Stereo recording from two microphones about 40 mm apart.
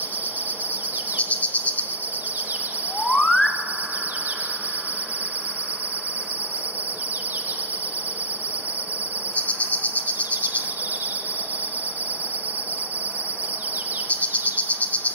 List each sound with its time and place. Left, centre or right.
1.3 s insect: left
3.0 s a sound: left
9.3 s cricket: left
14.0 s insect: left